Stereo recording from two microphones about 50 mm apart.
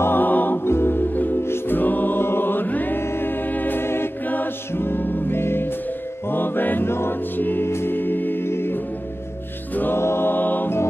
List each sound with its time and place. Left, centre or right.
0.0 s music: left
0.7 s music: left
1.4 s music: left
1.8 s music: left
3.0 s music: left
9.9 s choir: left